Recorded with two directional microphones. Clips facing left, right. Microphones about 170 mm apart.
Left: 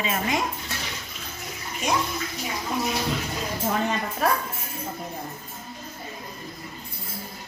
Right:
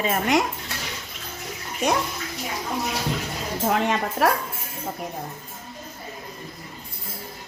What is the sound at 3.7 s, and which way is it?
Speech, 90° right.